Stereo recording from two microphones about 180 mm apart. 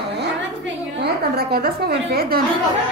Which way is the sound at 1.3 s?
60° right (ahead or behind).